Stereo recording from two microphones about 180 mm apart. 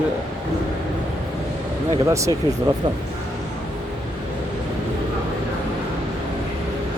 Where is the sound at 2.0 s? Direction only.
15° right (ahead or behind).